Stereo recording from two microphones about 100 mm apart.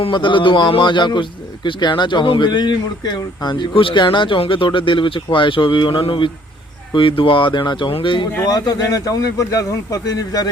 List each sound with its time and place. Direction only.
0.0 s a man's voice: 55° left (ahead or behind)
8.4 s speech: 40° left (ahead or behind)